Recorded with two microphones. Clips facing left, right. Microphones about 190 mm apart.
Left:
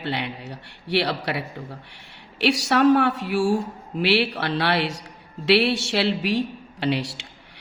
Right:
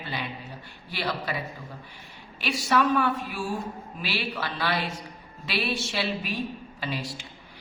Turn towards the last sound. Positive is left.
turn(degrees=75)  # may be behind; listen again after turning